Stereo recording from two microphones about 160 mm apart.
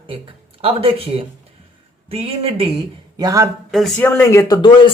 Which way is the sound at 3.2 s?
20° right (ahead or behind).